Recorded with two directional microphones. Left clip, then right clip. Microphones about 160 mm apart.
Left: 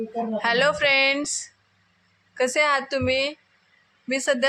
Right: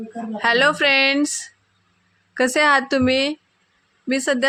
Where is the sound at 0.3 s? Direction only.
25° right (ahead or behind).